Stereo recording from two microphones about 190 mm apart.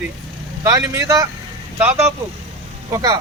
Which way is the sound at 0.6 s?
15° right (ahead or behind).